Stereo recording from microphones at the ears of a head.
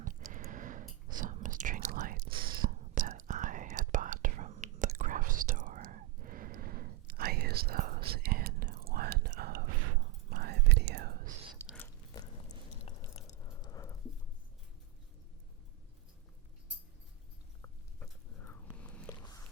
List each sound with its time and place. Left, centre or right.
0.0 s whispering: right
11.9 s biting: left